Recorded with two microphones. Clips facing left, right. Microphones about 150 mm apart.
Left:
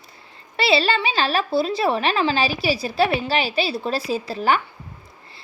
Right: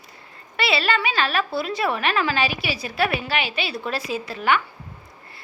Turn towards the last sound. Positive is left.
turn(degrees=35)  # may be behind; listen again after turning